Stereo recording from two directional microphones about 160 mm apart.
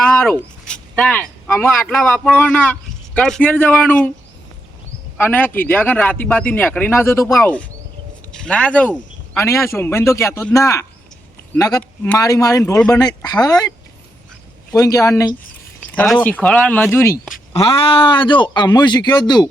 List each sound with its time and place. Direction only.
0.0 s a sound: 10° left (ahead or behind)
1.5 s a man's voice: 15° left (ahead or behind)
5.1 s a man's voice: 10° left (ahead or behind)
8.3 s a sound: 5° left (ahead or behind)
9.4 s a man's voice: 15° left (ahead or behind)
11.8 s speech: 10° left (ahead or behind)
12.2 s a man's voice: 20° left (ahead or behind)
15.9 s a man's voice: 10° left (ahead or behind)
17.5 s a man's voice: 35° left (ahead or behind)